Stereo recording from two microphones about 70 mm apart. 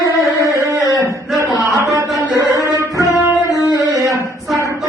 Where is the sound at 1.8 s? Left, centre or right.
Right.